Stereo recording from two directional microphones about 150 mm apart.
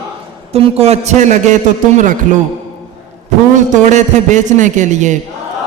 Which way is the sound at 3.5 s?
55° right (ahead or behind).